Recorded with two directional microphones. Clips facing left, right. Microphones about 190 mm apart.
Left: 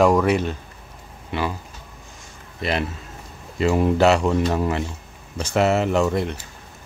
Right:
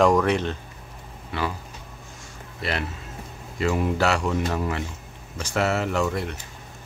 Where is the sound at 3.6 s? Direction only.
25° left (ahead or behind).